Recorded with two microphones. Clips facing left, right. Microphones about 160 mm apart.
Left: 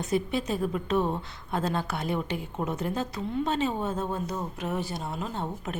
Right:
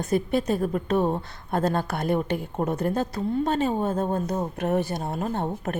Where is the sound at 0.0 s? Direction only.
50° right (ahead or behind).